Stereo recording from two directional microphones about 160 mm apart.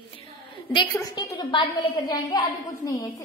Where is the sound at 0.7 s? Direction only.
25° left (ahead or behind).